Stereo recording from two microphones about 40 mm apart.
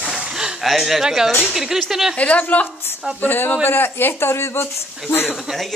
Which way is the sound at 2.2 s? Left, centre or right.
Left.